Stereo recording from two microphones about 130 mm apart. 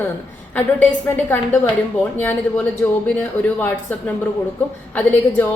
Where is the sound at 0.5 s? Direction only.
15° left (ahead or behind).